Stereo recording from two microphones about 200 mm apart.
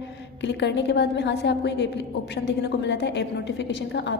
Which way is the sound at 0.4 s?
60° left (ahead or behind).